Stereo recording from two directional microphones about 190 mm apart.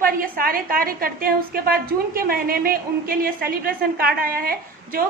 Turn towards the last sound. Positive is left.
turn(degrees=-50)  # may be behind; listen again after turning